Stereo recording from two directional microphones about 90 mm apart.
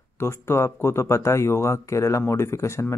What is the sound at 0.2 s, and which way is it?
Speech, 30° left (ahead or behind).